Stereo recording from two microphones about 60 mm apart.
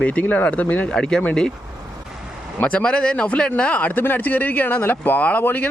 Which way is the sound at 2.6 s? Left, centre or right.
Centre.